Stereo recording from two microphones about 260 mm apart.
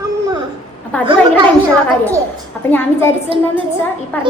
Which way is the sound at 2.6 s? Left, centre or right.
Centre.